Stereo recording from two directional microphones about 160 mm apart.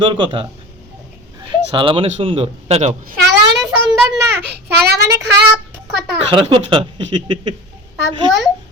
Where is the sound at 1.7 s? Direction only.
35° right (ahead or behind).